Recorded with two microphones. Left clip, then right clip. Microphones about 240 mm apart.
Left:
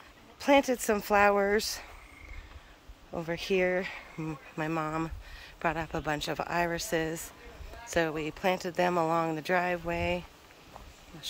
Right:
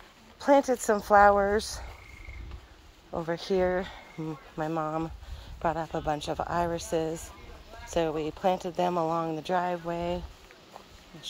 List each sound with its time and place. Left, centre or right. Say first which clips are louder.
0.4 s speech: right 2 dB; centre
0.7 s speech: right 4 dB; centre
1.6 s speech: left 1 dB; centre
3.3 s speech: even; centre